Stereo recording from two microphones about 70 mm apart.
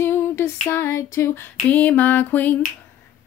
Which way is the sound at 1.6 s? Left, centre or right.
Left.